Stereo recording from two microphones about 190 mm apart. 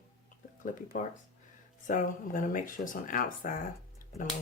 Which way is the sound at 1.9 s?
45° left (ahead or behind).